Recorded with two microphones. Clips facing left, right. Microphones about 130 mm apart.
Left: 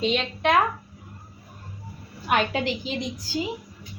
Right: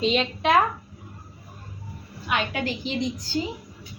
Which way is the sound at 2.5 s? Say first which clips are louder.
Left 2 dB; 25° left (ahead or behind).